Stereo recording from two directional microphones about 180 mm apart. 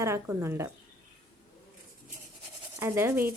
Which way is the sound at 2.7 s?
10° right (ahead or behind).